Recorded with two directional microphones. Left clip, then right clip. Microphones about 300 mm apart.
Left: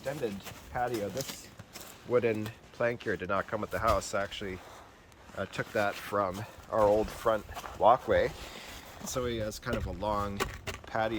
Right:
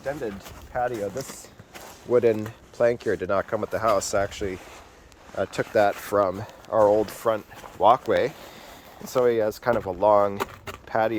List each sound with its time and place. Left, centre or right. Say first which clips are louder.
0.2 s speech: right 3 dB; centre
2.0 s speech: right 8 dB; right
9.0 s speech: right 13 dB; centre